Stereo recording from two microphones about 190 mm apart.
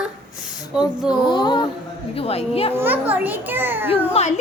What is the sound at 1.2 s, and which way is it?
A woman's voice, 25° left (ahead or behind).